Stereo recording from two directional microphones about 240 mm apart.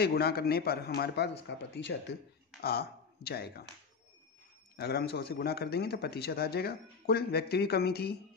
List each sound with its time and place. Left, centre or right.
0.0 s speech: left
4.7 s speech: left